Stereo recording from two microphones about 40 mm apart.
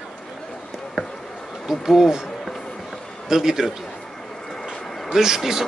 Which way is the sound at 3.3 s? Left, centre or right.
Centre.